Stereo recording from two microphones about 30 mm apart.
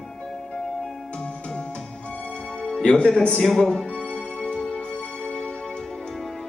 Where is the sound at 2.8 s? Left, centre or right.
Left.